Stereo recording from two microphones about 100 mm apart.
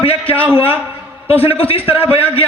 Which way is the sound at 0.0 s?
70° left (ahead or behind).